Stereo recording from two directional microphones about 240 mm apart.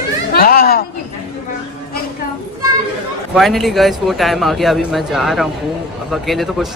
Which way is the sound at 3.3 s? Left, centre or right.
Centre.